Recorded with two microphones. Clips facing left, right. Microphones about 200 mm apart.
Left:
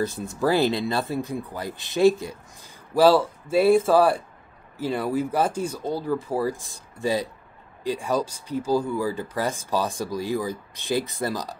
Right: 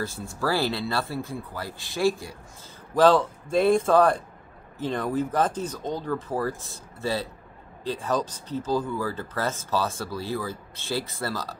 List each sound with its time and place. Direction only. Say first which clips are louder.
0.0 s speech: left 5 dB; 20° left (ahead or behind)
2.9 s speech: left 1 dB; 10° left (ahead or behind)